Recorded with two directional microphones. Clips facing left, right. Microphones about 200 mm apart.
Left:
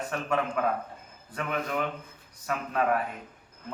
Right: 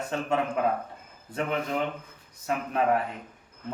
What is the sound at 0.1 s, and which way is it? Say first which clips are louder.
Speech: right 2 dB; 25° right (ahead or behind).